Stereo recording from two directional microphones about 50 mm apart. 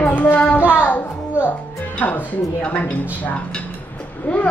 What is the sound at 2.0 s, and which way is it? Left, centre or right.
A woman's voice, left.